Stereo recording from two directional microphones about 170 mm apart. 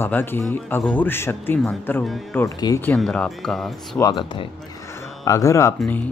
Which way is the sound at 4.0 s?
25° left (ahead or behind).